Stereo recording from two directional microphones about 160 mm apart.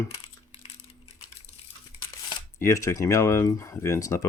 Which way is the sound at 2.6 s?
20° left (ahead or behind).